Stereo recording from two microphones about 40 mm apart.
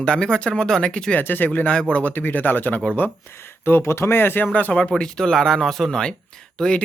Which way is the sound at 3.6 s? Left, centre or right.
Left.